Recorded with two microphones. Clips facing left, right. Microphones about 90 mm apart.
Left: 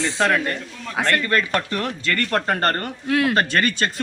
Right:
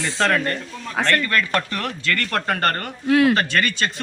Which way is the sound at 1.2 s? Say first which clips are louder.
Even; 25° left (ahead or behind).